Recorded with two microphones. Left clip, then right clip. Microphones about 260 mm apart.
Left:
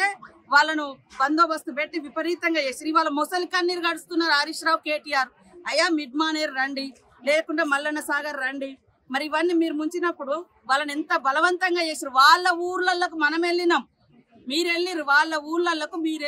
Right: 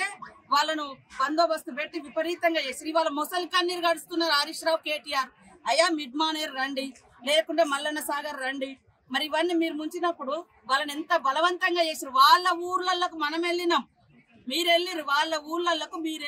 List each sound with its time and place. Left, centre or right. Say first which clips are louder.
0.0 s a woman's voice: left 7 dB; left
5.7 s a woman's voice: left 1 dB; left
14.6 s a woman's voice: right 1 dB; centre
14.9 s a woman's voice: left 5 dB; left